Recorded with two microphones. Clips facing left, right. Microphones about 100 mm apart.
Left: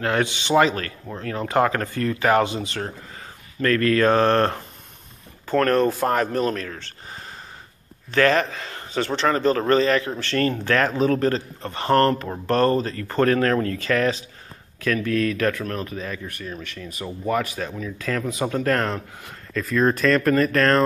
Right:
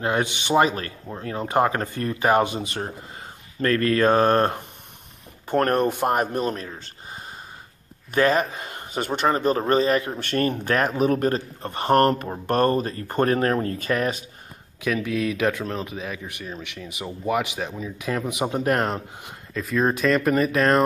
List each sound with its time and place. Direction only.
0.0 s speech: 20° right (ahead or behind)
3.6 s mantra: 30° right (ahead or behind)
4.4 s speech: 25° right (ahead or behind)
8.1 s a man's voice: 10° right (ahead or behind)
19.5 s a man's voice: 5° right (ahead or behind)